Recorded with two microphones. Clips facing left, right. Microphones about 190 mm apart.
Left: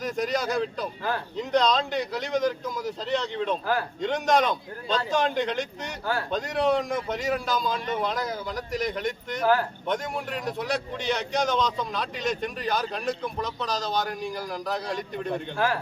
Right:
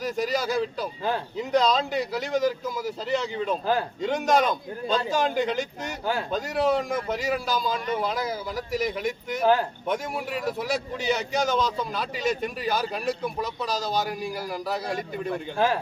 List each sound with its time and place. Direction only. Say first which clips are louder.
0.0 s a man's voice: right 1 dB; centre (ahead or behind)
9.4 s speech: right 1 dB; 20° right (ahead or behind)
9.8 s a man's voice: right 1 dB; 5° right (ahead or behind)
15.5 s speech: right 3 dB; 20° right (ahead or behind)